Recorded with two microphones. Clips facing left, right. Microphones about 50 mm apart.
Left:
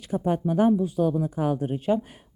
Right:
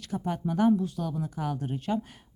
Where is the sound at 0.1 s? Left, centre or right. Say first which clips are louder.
Left 6 dB; left.